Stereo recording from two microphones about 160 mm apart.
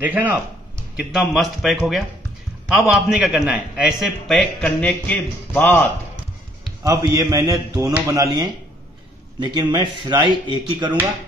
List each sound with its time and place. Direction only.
0.0 s a man's voice: 10° right (ahead or behind); by 5.9 s 10° left (ahead or behind)
6.8 s a man's voice: 20° right (ahead or behind)